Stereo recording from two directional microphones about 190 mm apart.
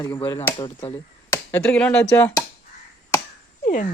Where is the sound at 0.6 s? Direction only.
30° left (ahead or behind).